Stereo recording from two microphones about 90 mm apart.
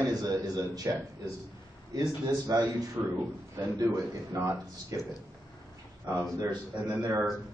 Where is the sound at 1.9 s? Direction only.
45° right (ahead or behind).